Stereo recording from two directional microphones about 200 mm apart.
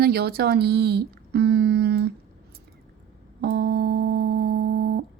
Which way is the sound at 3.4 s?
50° right (ahead or behind).